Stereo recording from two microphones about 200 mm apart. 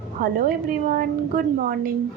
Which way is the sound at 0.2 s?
45° right (ahead or behind).